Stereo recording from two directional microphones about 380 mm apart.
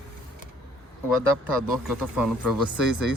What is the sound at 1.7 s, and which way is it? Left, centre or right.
Speech, centre.